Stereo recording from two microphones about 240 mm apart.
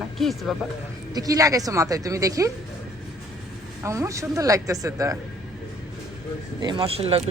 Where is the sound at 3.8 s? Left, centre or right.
Centre.